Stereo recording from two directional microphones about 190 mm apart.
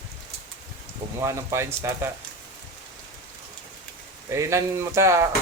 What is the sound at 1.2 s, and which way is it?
Speech, 15° right (ahead or behind).